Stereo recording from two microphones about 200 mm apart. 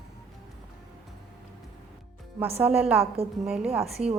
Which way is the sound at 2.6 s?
10° right (ahead or behind).